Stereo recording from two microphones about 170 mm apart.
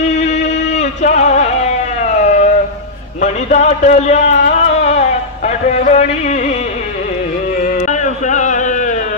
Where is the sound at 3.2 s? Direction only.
45° left (ahead or behind).